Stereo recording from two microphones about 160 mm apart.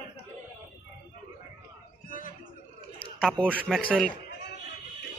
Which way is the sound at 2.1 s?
60° left (ahead or behind).